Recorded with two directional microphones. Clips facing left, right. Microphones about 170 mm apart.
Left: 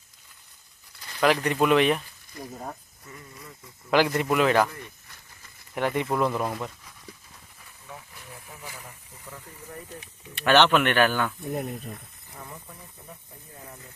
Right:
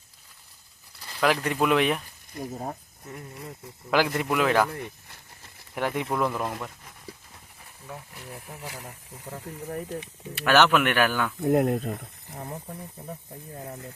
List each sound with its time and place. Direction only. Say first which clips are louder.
1.2 s speech: left 2 dB; 5° right (ahead or behind)
2.3 s speech: right 4 dB; 25° right (ahead or behind)
3.1 s speech: right 5 dB; 60° right (ahead or behind)
3.9 s speech: left 2 dB; 5° right (ahead or behind)
5.7 s speech: left 2 dB; 5° right (ahead or behind)
6.1 s speech: left 2 dB; 10° left (ahead or behind)
8.6 s speech: right 3 dB; 70° right (ahead or behind)
8.9 s speech: right 5 dB; 40° right (ahead or behind)
10.3 s speech: left 1 dB; 5° right (ahead or behind)
11.3 s speech: right 9 dB; 90° right
12.3 s speech: right 6 dB; 40° right (ahead or behind)